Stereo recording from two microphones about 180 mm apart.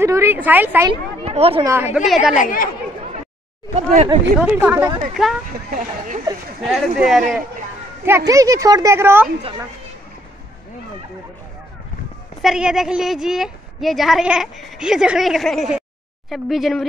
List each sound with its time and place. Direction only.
0.0 s speech: 15° right (ahead or behind)
1.2 s speech: 35° right (ahead or behind)
1.6 s speech: 15° right (ahead or behind)
2.3 s a woman's voice: 50° left (ahead or behind)
3.7 s speech: 35° right (ahead or behind)
4.4 s speech: 10° right (ahead or behind)
5.1 s a woman's voice: centre (ahead or behind)
5.7 s speech: 50° right (ahead or behind)
6.6 s a woman's voice: centre (ahead or behind)
8.3 s speech: 20° right (ahead or behind)
12.4 s a woman's voice: 5° right (ahead or behind)